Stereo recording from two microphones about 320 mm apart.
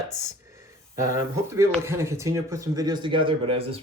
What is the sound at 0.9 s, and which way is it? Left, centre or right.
Speech, centre.